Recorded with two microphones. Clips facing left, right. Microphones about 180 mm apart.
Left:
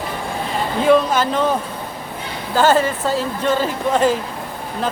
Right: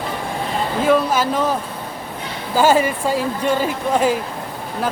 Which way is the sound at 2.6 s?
10° right (ahead or behind).